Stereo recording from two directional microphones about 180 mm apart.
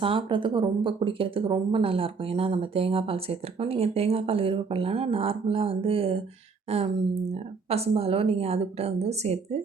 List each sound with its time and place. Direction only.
0.0 s speech: 30° right (ahead or behind)